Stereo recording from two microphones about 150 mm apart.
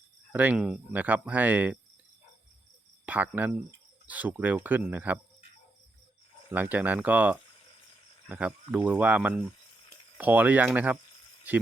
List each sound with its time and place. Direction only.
0.3 s speech: 5° right (ahead or behind)
3.1 s speech: 10° right (ahead or behind)
6.5 s speech: 10° right (ahead or behind)